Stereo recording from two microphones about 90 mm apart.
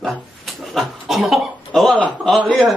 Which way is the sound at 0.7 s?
Centre (ahead or behind).